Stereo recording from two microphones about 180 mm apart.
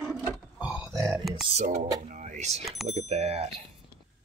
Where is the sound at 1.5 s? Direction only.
40° right (ahead or behind).